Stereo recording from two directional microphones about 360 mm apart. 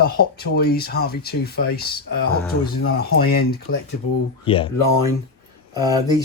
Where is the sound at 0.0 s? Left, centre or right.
Left.